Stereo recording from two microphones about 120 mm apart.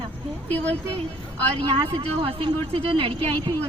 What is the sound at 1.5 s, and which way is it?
Speech, 50° right (ahead or behind).